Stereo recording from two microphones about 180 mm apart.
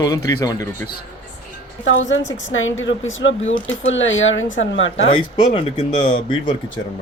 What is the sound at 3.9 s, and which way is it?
Speech, 90° left.